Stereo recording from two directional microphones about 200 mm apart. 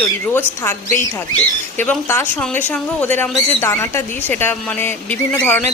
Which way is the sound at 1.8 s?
10° left (ahead or behind).